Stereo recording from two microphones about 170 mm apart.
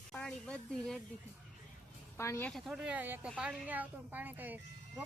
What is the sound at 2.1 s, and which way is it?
Speech, 15° left (ahead or behind).